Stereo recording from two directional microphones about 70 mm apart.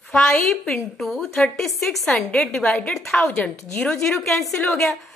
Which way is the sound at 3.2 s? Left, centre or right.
Left.